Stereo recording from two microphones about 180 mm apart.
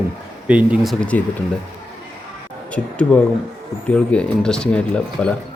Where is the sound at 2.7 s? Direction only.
5° left (ahead or behind).